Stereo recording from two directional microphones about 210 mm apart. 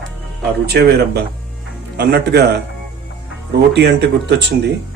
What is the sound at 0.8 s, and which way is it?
Speech, 55° right (ahead or behind).